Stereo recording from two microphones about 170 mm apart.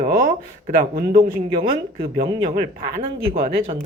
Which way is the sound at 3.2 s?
35° right (ahead or behind).